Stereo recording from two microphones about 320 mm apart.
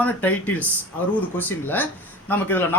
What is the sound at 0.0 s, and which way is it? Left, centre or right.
Speech, centre.